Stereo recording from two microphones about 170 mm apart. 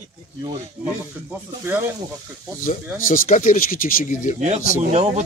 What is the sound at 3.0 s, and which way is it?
Speech, 55° left (ahead or behind).